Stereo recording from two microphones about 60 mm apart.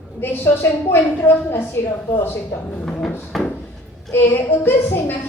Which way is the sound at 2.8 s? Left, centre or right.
Centre.